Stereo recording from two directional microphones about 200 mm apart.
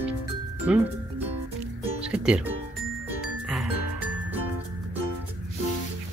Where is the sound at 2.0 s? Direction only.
5° right (ahead or behind).